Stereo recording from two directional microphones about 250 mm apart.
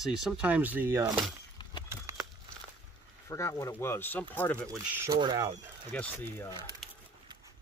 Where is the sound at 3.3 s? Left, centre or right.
Centre.